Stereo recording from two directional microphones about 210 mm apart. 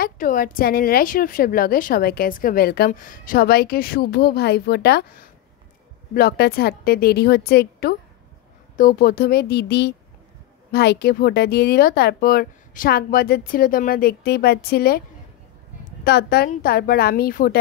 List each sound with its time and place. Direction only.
0.0 s a woman's voice: 40° left (ahead or behind)